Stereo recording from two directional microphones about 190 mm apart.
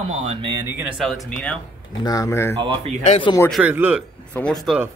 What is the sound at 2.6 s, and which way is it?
Speech, 25° right (ahead or behind).